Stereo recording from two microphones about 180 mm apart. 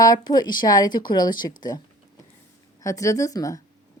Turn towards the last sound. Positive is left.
turn(degrees=20)  # may be behind; listen again after turning